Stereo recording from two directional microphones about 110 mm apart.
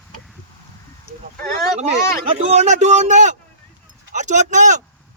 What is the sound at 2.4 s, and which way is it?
Speech, 85° right.